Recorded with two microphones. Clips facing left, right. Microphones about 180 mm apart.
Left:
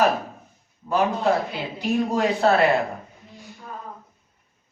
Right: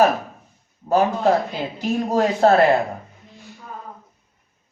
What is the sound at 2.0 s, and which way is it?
Speech, 45° right (ahead or behind).